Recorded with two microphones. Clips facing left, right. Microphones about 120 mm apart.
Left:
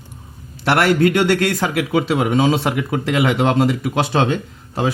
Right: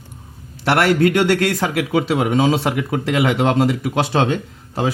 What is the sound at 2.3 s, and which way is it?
Speech, 30° right (ahead or behind).